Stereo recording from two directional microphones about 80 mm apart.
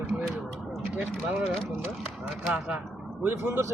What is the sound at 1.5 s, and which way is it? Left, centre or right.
Speech, centre.